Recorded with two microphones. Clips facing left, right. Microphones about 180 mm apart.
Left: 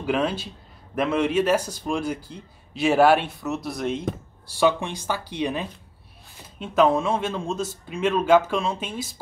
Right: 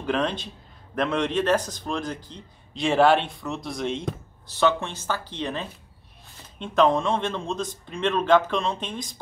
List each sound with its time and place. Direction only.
0.0 s speech: 5° left (ahead or behind)